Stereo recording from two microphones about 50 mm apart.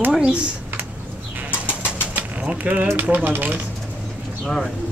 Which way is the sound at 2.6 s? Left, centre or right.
Right.